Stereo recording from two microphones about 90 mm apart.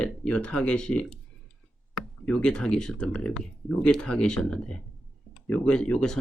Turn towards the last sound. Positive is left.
turn(degrees=10)  # may be behind; listen again after turning